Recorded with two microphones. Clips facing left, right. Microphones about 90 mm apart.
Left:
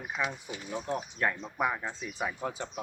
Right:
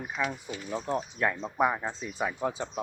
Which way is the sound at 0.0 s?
15° left (ahead or behind).